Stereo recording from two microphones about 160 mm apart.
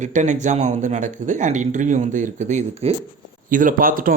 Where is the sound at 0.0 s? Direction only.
50° right (ahead or behind).